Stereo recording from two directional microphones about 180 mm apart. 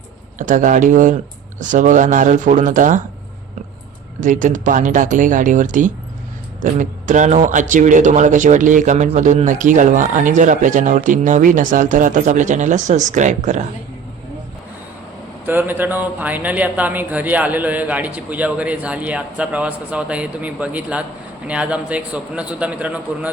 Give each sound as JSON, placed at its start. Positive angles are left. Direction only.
{"t": 0.3, "sound": "speech", "side_deg": -45}
{"t": 4.2, "sound": "speech", "side_deg": -45}
{"t": 15.4, "sound": "a man's voice", "side_deg": -10}